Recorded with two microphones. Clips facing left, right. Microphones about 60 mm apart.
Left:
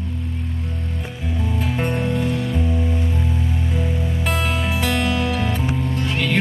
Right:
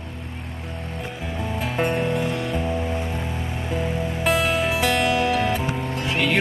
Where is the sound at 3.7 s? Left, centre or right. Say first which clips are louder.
Even; centre.